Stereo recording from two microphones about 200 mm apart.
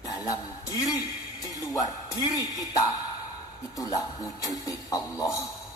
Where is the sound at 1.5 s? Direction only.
20° left (ahead or behind).